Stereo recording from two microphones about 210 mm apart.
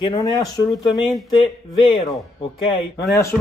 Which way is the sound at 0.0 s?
20° left (ahead or behind).